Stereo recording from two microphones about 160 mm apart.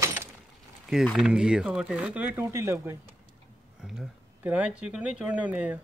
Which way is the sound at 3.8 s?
5° right (ahead or behind).